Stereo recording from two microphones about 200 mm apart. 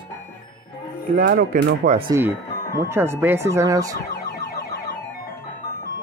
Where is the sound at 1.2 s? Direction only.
45° right (ahead or behind).